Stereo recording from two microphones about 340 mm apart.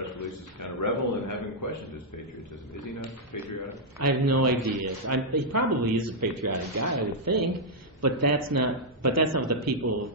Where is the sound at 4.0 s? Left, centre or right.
Right.